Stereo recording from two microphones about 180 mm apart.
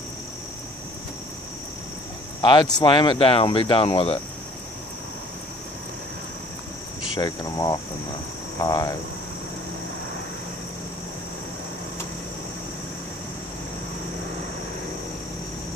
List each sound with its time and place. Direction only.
2.4 s speech: 25° left (ahead or behind)
7.2 s speech: 20° left (ahead or behind)